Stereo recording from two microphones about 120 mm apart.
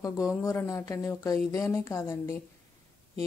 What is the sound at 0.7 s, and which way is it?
Speech, 30° left (ahead or behind).